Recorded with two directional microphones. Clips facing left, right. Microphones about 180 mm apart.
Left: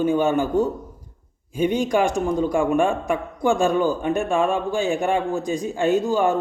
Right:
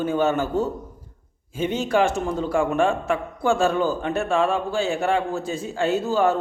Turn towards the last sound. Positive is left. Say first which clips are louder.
# left 1 dB
turn(degrees=15)  # may be behind; listen again after turning